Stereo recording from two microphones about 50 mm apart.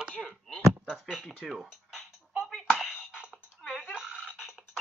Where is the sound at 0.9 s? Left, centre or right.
Centre.